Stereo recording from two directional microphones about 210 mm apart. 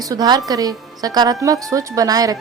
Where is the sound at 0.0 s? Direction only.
15° right (ahead or behind).